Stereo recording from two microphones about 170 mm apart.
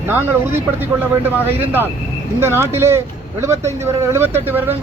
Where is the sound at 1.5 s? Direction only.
10° right (ahead or behind).